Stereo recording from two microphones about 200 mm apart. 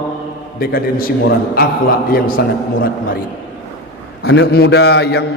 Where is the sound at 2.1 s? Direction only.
45° left (ahead or behind).